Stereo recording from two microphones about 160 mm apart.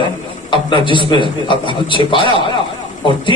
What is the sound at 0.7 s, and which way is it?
A man's voice, 30° left (ahead or behind).